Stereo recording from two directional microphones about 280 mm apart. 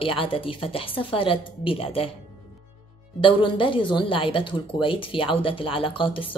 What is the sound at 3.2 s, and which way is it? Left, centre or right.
Speech, centre.